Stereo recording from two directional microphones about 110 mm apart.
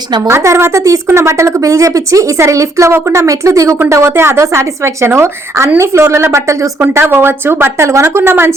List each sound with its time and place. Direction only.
0.3 s speech: 25° right (ahead or behind)